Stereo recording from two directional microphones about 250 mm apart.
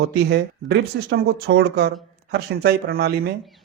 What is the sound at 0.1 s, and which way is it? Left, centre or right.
A man's voice, right.